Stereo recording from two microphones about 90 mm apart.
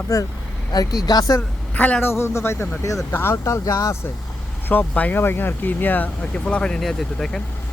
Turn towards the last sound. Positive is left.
turn(degrees=5)  # may be behind; listen again after turning